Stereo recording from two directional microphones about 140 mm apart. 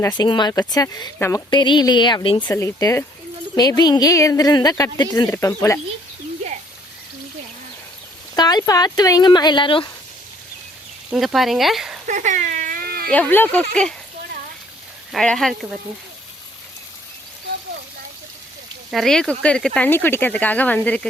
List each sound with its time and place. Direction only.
0.2 s a woman's voice: 30° left (ahead or behind)
2.5 s a woman's voice: 20° left (ahead or behind)
8.4 s a woman's voice: 30° left (ahead or behind)
11.1 s speech: 5° right (ahead or behind)
12.0 s a sound: 65° right (ahead or behind); by 13.1 s 90° right
13.1 s speech: 10° left (ahead or behind)
15.1 s speech: centre (ahead or behind)
18.9 s speech: centre (ahead or behind)